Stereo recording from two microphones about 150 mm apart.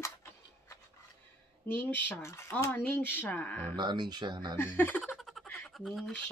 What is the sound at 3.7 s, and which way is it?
Speech, 30° right (ahead or behind).